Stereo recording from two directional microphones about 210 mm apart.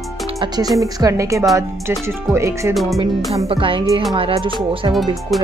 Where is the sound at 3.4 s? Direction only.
25° right (ahead or behind).